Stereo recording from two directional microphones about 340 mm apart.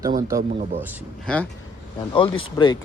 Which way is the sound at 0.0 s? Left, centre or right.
Centre.